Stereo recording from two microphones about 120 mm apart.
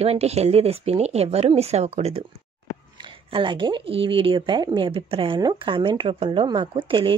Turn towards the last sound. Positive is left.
turn(degrees=-45)  # may be behind; listen again after turning